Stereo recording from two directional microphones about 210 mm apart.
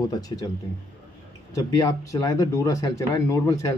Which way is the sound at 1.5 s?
15° left (ahead or behind).